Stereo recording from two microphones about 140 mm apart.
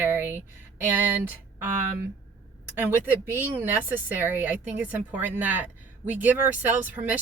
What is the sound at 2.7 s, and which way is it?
A woman's voice, 15° right (ahead or behind).